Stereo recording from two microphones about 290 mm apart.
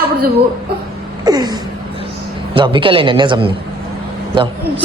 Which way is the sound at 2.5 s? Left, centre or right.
Centre.